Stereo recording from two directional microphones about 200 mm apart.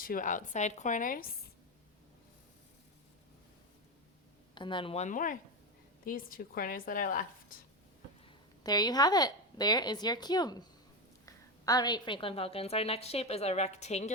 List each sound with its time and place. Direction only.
0.0 s a woman's voice: 45° left (ahead or behind)
4.5 s a woman's voice: 25° left (ahead or behind); by 7.3 s 40° left (ahead or behind)
8.6 s a woman's voice: 20° left (ahead or behind); by 14.1 s 35° left (ahead or behind)